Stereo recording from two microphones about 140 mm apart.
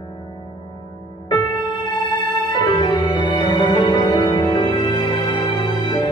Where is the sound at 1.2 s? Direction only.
35° left (ahead or behind).